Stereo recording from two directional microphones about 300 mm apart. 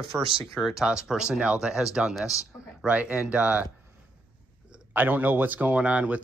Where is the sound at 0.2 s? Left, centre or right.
Centre.